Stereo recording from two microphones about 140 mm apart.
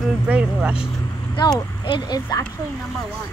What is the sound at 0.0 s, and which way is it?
Speech, 10° right (ahead or behind).